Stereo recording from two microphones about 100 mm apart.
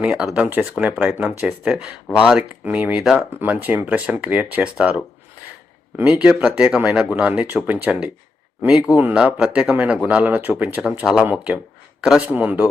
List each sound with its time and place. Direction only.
0.0 s speech: 5° right (ahead or behind)
3.3 s speech: 15° right (ahead or behind)
6.0 s speech: 10° right (ahead or behind)
9.1 s speech: 10° right (ahead or behind)